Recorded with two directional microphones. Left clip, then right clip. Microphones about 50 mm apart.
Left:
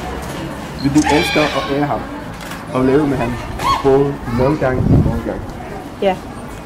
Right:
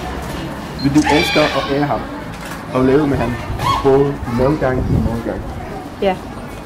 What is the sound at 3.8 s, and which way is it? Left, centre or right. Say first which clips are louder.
Speech: right 2 dB; centre.